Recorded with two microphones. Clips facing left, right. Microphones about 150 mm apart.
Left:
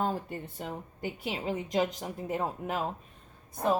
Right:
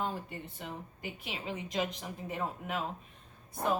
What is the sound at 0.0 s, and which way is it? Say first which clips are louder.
A woman's voice: left 5 dB; 40° left (ahead or behind).